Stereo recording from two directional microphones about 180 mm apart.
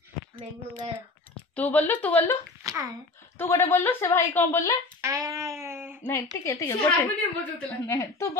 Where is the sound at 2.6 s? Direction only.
20° right (ahead or behind).